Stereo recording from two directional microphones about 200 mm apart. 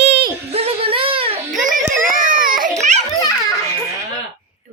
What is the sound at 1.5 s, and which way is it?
Music, 40° right (ahead or behind).